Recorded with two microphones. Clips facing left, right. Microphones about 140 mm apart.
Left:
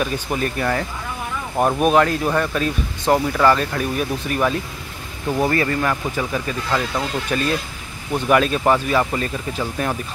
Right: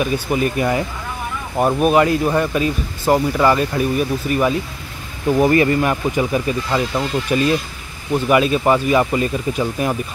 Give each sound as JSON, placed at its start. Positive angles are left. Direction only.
{"t": 0.0, "sound": "speech", "side_deg": -5}
{"t": 1.6, "sound": "speech", "side_deg": 0}
{"t": 5.4, "sound": "speech", "side_deg": -15}